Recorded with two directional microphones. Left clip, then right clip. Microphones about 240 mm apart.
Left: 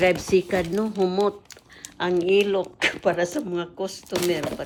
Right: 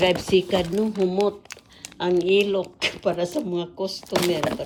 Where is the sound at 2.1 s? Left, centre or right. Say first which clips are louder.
Even; left.